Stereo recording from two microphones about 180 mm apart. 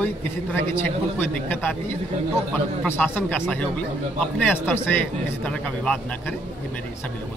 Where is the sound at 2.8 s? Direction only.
10° left (ahead or behind).